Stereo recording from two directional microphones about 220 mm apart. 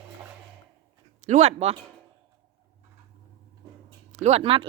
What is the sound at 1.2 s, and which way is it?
Speech, 30° right (ahead or behind).